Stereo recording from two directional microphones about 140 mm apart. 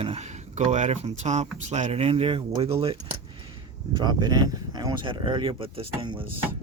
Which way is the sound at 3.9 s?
30° right (ahead or behind).